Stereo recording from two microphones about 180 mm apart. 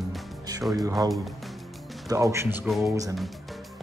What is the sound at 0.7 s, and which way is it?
Speech, 20° right (ahead or behind).